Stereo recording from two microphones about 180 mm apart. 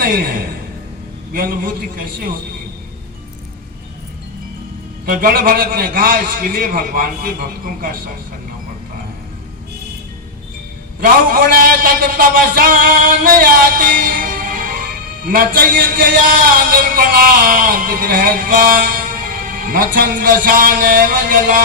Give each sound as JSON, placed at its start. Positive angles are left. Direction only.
{"t": 0.0, "sound": "a man's voice", "side_deg": -50}
{"t": 5.0, "sound": "a man's voice", "side_deg": -50}
{"t": 11.0, "sound": "a man's voice", "side_deg": -50}